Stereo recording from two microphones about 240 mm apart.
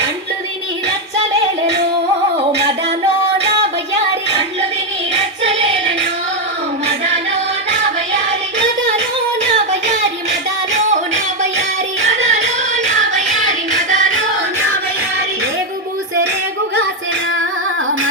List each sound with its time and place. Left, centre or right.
5.4 s music: right
12.0 s music: right